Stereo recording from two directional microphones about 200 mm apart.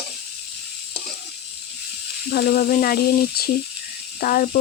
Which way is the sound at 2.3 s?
45° left (ahead or behind).